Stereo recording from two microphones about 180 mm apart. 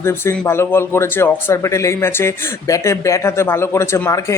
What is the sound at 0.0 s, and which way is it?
Speech, 15° left (ahead or behind).